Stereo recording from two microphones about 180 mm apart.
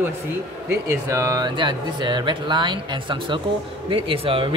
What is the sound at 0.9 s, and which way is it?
A man's voice, 15° right (ahead or behind).